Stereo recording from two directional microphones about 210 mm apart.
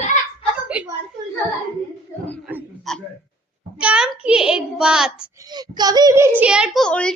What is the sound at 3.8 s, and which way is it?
A woman's voice, 5° right (ahead or behind).